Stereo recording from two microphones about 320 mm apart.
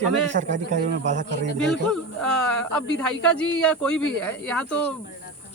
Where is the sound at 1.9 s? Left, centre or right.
Centre.